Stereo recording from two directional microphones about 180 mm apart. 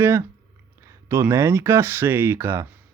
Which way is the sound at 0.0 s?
15° right (ahead or behind).